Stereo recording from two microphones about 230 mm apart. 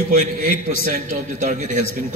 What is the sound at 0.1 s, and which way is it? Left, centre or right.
A man's voice, right.